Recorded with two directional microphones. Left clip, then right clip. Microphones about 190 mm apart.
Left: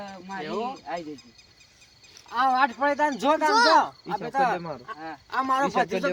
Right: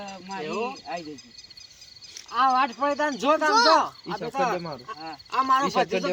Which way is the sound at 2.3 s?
10° left (ahead or behind).